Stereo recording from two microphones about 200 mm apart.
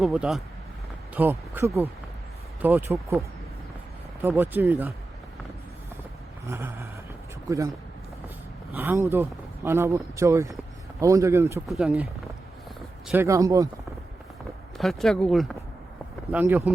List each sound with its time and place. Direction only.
0.0 s speech: 5° right (ahead or behind)
6.4 s a sound: 10° right (ahead or behind)
7.4 s a man's voice: 15° right (ahead or behind)
8.7 s speech: 10° right (ahead or behind)
11.7 s speech: 5° right (ahead or behind)
13.1 s speech: 15° right (ahead or behind)
14.8 s speech: centre (ahead or behind)